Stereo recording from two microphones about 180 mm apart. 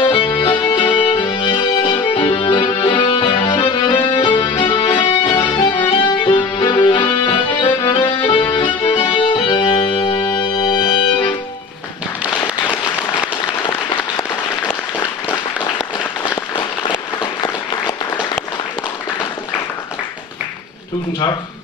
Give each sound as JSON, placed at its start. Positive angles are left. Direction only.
{"t": 0.0, "sound": "music", "side_deg": 30}
{"t": 16.5, "sound": "applause", "side_deg": 25}